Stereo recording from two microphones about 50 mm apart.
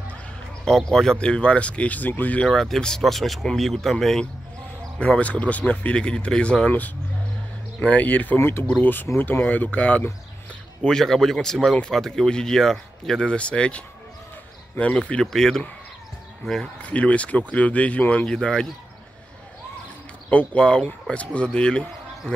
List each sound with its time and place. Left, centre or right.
0.7 s speech: centre
1.2 s speech: left
2.4 s speech: centre
4.9 s speech: left
7.8 s speech: left
8.4 s speech: left
8.8 s speech: left
10.8 s speech: centre
15.3 s speech: centre
16.8 s speech: left
18.2 s speech: centre
20.2 s speech: left